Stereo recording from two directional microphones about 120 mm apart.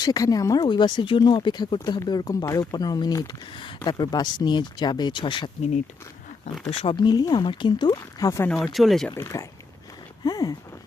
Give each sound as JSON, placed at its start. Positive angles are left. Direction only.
{"t": 0.0, "sound": "speech", "side_deg": 30}
{"t": 3.2, "sound": "speech", "side_deg": 45}
{"t": 6.4, "sound": "speech", "side_deg": 55}
{"t": 6.9, "sound": "speech", "side_deg": 35}
{"t": 8.6, "sound": "speech", "side_deg": 0}
{"t": 9.0, "sound": "speech", "side_deg": 25}